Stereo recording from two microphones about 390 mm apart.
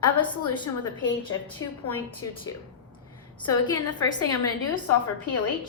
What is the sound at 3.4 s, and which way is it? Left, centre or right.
Speech, centre.